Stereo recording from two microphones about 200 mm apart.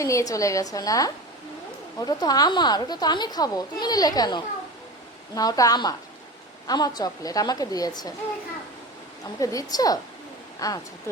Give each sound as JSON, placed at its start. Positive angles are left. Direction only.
{"t": 0.0, "sound": "a woman's voice", "side_deg": 15}
{"t": 9.4, "sound": "a woman's voice", "side_deg": 15}